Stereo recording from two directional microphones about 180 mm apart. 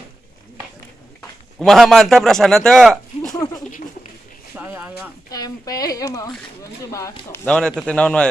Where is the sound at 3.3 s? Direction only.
20° left (ahead or behind).